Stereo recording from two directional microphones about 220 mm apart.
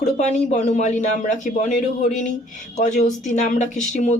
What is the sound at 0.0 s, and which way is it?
Speech, 30° left (ahead or behind).